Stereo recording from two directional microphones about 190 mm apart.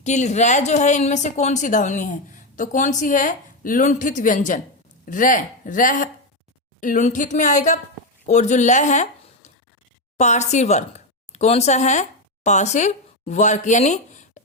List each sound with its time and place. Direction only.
0.0 s speech: 35° left (ahead or behind)